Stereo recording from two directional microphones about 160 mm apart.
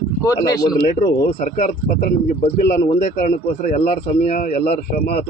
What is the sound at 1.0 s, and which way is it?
Speech, 45° left (ahead or behind).